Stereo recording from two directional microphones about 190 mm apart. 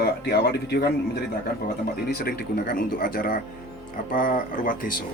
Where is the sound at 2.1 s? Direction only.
55° left (ahead or behind).